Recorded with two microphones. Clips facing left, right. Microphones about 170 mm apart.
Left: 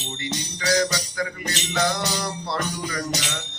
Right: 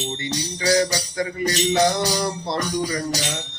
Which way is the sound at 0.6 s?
30° right (ahead or behind).